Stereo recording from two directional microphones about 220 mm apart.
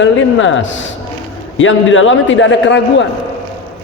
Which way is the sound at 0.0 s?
60° left (ahead or behind).